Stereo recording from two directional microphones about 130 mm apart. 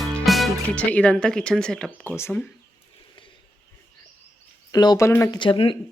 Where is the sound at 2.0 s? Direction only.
20° left (ahead or behind).